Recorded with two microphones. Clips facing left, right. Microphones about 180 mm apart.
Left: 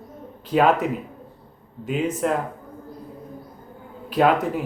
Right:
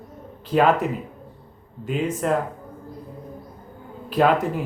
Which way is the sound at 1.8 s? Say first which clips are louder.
Even; centre (ahead or behind).